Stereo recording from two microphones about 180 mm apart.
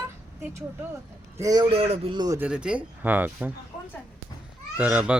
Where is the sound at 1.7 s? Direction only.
35° right (ahead or behind).